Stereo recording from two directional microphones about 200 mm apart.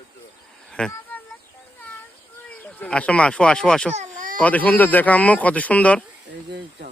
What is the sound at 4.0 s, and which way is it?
Baby cry, 40° right (ahead or behind).